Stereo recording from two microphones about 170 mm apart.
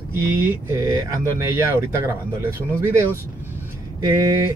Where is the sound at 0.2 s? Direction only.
15° right (ahead or behind).